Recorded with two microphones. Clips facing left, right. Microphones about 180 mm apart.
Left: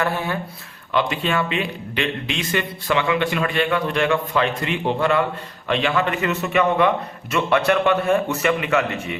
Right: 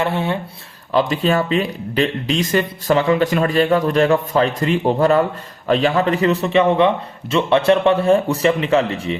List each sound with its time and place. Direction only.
0.0 s speech: 25° right (ahead or behind)
0.9 s speech: 35° right (ahead or behind)